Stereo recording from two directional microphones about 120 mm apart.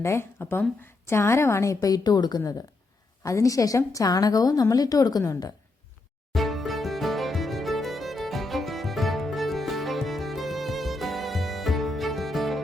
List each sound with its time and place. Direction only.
0.0 s a woman's voice: 20° left (ahead or behind)
6.3 s music: centre (ahead or behind)